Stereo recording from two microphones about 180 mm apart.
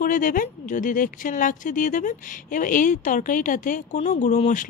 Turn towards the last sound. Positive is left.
turn(degrees=40)  # may be behind; listen again after turning